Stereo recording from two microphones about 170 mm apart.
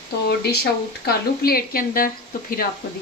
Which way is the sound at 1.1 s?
60° left (ahead or behind).